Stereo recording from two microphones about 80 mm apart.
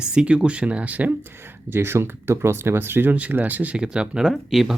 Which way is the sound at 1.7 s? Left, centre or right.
Right.